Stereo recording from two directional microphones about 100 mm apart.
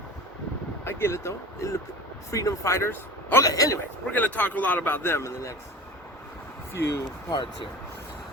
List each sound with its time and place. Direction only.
0.9 s speech: 25° left (ahead or behind)
3.4 s speech: 35° left (ahead or behind)
4.1 s a man's voice: 15° left (ahead or behind)
6.7 s speech: 25° left (ahead or behind)
7.3 s speech: 50° left (ahead or behind)